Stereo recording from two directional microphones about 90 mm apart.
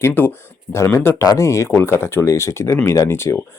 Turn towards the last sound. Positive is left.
turn(degrees=30)  # may be behind; listen again after turning